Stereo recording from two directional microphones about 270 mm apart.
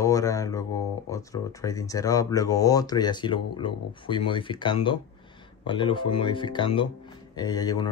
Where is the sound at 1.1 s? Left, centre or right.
Centre.